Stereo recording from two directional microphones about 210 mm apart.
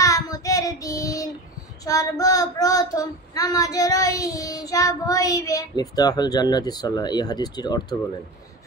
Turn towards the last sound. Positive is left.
turn(degrees=20)  # may be behind; listen again after turning